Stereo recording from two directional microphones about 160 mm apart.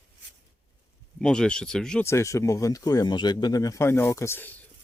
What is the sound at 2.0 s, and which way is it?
Speech, 20° left (ahead or behind).